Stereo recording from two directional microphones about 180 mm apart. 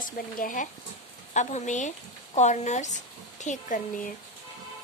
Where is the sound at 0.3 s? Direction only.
50° left (ahead or behind).